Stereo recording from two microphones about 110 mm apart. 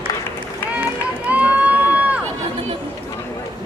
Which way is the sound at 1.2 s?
15° right (ahead or behind).